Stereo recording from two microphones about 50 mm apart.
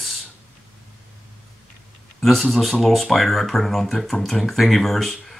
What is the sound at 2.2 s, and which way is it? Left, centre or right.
Speech, centre.